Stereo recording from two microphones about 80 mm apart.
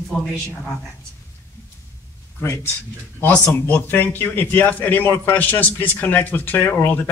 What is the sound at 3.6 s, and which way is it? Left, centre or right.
Speech, left.